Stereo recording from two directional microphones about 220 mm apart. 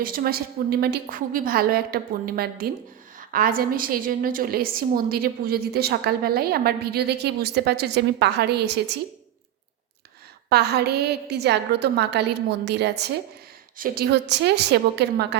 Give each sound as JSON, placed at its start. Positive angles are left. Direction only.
{"t": 0.0, "sound": "a woman's voice", "side_deg": -40}
{"t": 10.5, "sound": "a woman's voice", "side_deg": -50}